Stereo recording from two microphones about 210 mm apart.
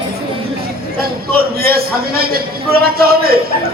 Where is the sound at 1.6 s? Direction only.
45° right (ahead or behind).